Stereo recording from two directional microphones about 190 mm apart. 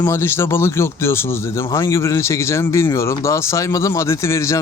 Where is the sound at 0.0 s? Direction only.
10° left (ahead or behind).